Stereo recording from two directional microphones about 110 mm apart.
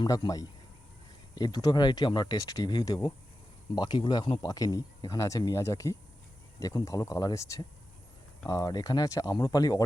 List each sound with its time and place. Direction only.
0.0 s speech: 40° left (ahead or behind)